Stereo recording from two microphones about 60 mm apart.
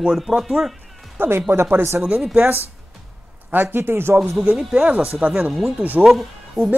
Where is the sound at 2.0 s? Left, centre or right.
Right.